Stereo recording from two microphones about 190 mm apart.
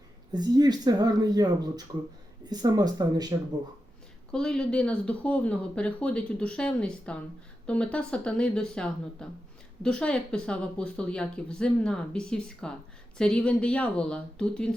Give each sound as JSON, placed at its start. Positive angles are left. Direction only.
{"t": 0.3, "sound": "speech", "side_deg": -20}
{"t": 4.3, "sound": "speech", "side_deg": 5}